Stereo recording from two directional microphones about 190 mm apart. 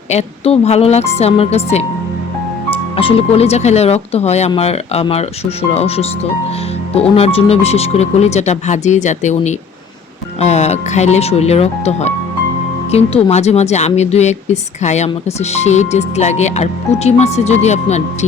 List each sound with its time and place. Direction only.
0.1 s speech: 35° left (ahead or behind)
7.2 s speech: 30° left (ahead or behind)